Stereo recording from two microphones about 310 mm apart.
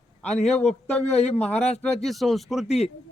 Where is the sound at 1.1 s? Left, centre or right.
Left.